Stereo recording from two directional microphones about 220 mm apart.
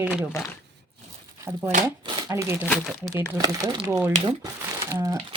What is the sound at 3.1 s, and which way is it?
Speech, 15° right (ahead or behind).